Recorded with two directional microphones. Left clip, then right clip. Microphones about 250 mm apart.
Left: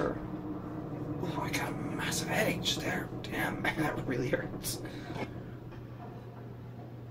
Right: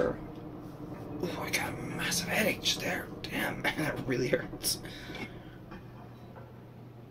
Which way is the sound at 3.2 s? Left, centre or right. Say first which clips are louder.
Right 1 dB; right.